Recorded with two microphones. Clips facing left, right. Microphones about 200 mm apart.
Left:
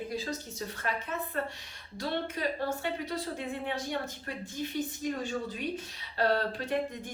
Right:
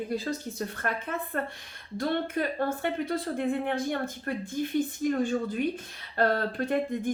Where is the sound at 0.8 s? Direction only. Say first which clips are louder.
Left 1 dB; 55° right (ahead or behind).